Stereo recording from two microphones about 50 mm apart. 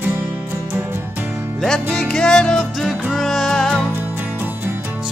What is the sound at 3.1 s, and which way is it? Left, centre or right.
Music, centre.